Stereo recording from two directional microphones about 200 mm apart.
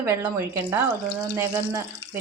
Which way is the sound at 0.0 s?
10° right (ahead or behind).